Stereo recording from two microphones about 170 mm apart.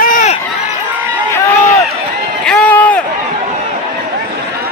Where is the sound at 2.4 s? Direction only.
5° left (ahead or behind).